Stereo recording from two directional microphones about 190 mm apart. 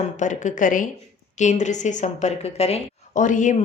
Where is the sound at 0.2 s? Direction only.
40° left (ahead or behind).